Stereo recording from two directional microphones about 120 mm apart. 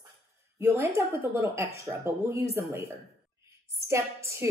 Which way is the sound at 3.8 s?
20° right (ahead or behind).